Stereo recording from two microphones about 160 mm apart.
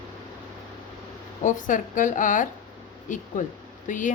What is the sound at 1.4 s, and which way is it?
A woman's voice, 55° left (ahead or behind).